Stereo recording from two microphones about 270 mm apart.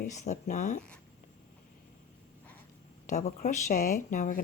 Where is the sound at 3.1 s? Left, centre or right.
Left.